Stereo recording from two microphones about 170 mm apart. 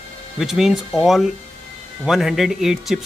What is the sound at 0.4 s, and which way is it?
Speech, centre (ahead or behind).